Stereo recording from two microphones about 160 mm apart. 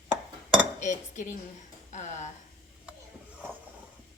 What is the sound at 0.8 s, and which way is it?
A woman's voice, 50° left (ahead or behind).